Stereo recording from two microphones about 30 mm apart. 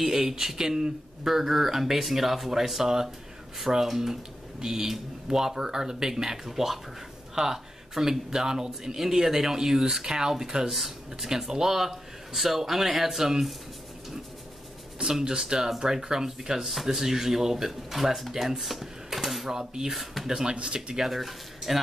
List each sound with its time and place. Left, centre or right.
0.0 s speech: centre
9.0 s speech: centre
10.7 s speech: centre
11.2 s speech: centre
15.2 s speech: right
16.6 s speech: centre
18.6 s sewing machine: centre
19.4 s speech: centre
20.5 s speech: right
20.9 s speech: centre